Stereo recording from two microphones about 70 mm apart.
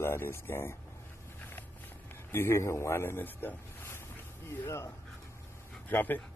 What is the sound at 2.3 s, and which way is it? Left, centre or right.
Speech, left.